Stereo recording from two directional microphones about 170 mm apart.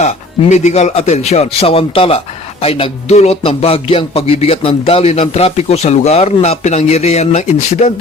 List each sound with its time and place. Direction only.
0.5 s a man's voice: 45° left (ahead or behind)